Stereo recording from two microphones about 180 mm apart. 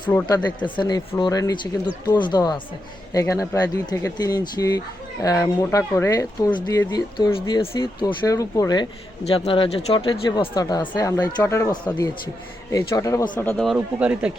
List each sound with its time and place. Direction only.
0.1 s speech: 10° left (ahead or behind)
0.4 s speech: 25° left (ahead or behind)
13.3 s speech: 5° left (ahead or behind)
13.7 s speech: 5° right (ahead or behind)